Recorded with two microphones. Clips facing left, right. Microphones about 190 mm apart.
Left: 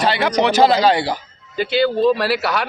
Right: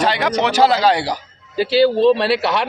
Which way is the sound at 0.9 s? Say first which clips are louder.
Even; 10° right (ahead or behind).